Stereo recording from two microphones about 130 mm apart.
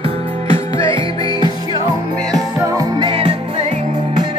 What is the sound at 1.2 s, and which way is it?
Music, 30° left (ahead or behind).